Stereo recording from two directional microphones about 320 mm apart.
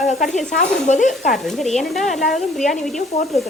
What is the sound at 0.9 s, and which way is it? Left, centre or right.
Speech, left.